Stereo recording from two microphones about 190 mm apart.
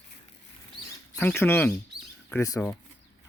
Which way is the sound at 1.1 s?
10° left (ahead or behind).